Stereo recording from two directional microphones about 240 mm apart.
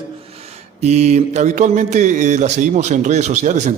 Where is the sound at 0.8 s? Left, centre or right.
Right.